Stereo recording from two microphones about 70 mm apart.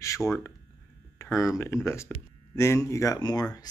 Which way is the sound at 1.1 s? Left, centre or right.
Left.